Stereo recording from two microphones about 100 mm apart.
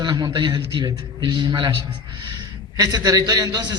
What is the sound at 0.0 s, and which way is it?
A man's voice, 45° right (ahead or behind).